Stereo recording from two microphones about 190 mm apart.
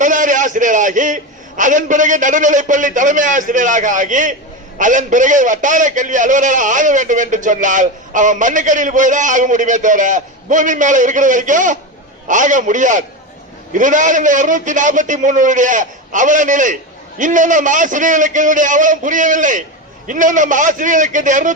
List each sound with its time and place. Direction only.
0.0 s a man's voice: 40° right (ahead or behind)